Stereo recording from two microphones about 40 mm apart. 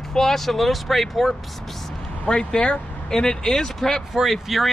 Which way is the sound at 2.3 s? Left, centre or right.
Left.